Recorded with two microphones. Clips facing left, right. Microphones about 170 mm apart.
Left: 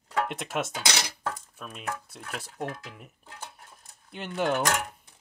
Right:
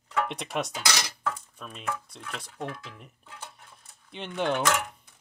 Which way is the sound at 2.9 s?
5° left (ahead or behind).